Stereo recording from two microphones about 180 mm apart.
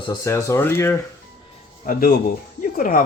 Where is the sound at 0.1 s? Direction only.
15° left (ahead or behind).